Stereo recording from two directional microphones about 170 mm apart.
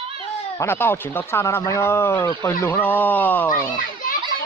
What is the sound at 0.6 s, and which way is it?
Speech, 15° left (ahead or behind).